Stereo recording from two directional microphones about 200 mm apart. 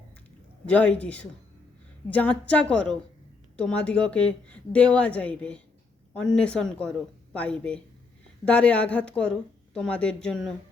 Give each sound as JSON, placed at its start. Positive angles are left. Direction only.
{"t": 0.7, "sound": "a man's voice", "side_deg": 5}